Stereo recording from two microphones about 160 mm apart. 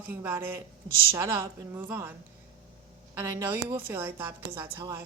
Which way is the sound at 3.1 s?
15° right (ahead or behind).